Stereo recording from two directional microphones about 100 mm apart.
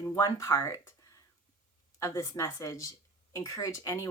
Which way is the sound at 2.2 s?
35° left (ahead or behind).